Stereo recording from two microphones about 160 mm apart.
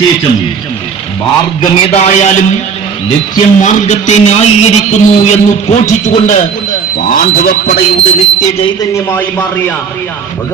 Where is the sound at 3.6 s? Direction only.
50° left (ahead or behind).